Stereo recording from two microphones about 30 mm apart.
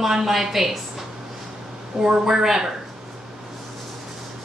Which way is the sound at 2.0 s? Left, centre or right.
Centre.